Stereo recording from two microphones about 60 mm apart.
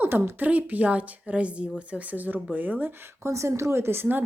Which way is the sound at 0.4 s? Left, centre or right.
Right.